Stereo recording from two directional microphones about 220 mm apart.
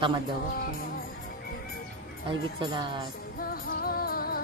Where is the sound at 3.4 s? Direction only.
40° left (ahead or behind).